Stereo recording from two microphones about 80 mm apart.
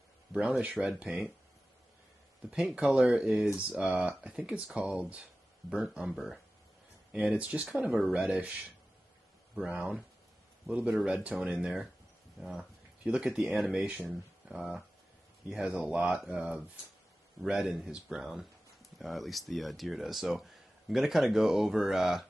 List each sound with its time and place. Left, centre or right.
0.3 s speech: centre
2.5 s speech: centre
7.6 s speech: centre
9.7 s speech: centre
13.0 s a man's voice: centre